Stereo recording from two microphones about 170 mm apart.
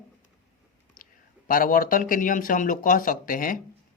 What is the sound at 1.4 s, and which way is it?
Speech, 55° left (ahead or behind).